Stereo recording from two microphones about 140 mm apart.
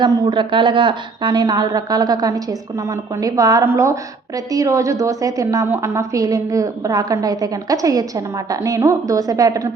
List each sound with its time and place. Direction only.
0.0 s a woman's voice: 35° right (ahead or behind)